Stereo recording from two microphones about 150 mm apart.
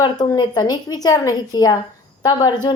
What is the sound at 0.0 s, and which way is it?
A woman's voice, 30° left (ahead or behind).